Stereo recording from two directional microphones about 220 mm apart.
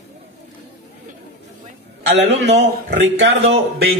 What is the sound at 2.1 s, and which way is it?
Speech, 50° right (ahead or behind).